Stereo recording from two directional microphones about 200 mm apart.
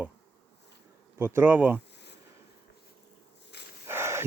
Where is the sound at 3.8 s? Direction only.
10° right (ahead or behind).